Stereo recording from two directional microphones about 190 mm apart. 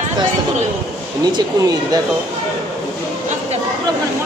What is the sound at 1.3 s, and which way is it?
Speech, 20° right (ahead or behind).